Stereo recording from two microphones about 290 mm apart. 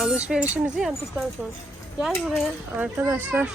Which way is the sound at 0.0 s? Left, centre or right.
Centre.